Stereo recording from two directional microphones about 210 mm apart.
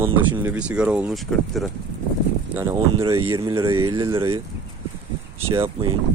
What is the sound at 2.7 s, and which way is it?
Speech, 20° right (ahead or behind).